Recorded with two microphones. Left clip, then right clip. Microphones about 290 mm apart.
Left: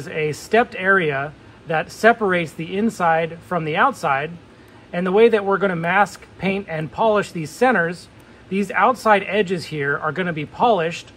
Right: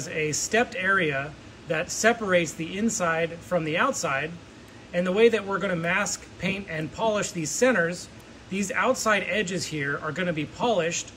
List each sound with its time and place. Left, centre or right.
0.0 s speech: centre